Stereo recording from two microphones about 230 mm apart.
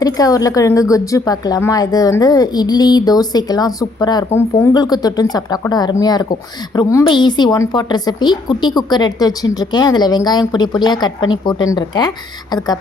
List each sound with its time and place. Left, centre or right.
0.0 s a woman's voice: centre